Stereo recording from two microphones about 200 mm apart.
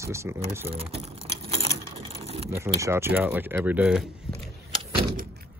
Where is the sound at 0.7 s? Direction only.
30° right (ahead or behind).